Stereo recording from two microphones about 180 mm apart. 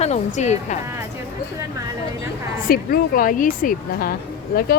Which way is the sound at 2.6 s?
55° left (ahead or behind).